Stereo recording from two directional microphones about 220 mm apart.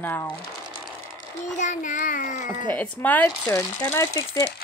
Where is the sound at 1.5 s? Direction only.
35° left (ahead or behind).